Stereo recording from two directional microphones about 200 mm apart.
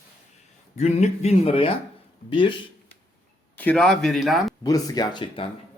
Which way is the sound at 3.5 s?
5° left (ahead or behind).